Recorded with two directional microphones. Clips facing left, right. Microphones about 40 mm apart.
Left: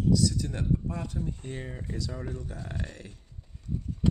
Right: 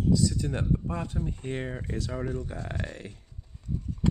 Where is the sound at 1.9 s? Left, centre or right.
Right.